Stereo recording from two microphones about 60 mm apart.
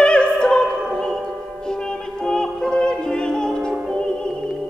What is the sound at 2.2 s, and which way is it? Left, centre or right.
Music, centre.